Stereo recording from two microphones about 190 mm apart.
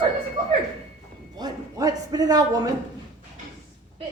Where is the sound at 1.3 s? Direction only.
20° right (ahead or behind).